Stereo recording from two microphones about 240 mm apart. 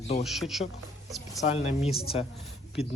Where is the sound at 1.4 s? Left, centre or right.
Left.